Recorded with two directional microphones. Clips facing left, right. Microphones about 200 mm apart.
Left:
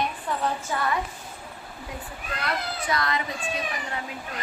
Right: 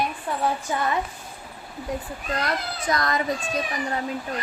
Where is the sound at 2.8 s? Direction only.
40° right (ahead or behind).